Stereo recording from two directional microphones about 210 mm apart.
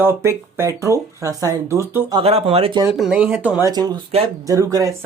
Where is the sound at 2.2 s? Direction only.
30° right (ahead or behind).